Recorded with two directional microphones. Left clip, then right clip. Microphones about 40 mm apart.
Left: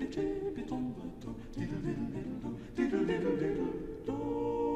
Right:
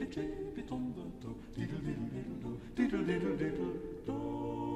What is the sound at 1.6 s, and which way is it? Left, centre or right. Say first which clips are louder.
Music: left 3 dB; right.